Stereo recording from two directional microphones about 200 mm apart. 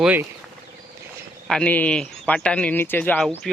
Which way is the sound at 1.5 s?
5° left (ahead or behind).